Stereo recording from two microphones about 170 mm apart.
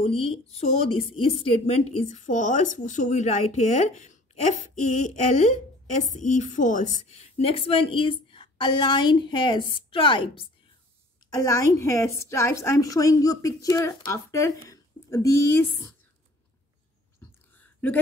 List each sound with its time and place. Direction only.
0.0 s a woman's voice: 35° left (ahead or behind)
11.2 s a woman's voice: 20° left (ahead or behind)
17.2 s a sound: 10° left (ahead or behind)